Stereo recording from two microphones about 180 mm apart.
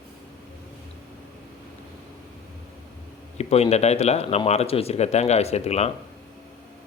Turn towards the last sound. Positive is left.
turn(degrees=35)  # may be behind; listen again after turning